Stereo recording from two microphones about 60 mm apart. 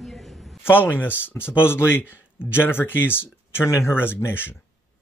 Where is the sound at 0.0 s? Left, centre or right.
Centre.